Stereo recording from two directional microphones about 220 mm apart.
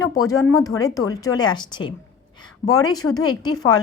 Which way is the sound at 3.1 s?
20° left (ahead or behind).